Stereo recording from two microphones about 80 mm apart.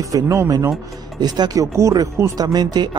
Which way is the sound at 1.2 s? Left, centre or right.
Right.